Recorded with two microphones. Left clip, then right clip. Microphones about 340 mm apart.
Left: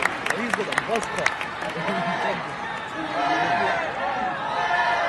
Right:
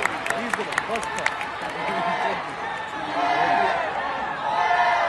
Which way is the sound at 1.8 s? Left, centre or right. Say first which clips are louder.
Right 1 dB; right.